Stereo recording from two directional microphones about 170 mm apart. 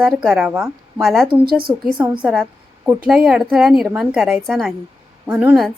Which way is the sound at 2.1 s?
5° right (ahead or behind).